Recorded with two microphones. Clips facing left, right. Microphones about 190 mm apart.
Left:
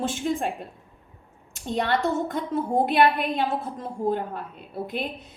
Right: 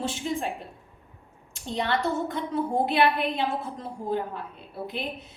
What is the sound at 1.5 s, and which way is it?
A woman's voice, 50° left (ahead or behind).